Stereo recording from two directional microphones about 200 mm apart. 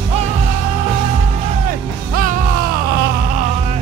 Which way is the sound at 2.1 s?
45° right (ahead or behind).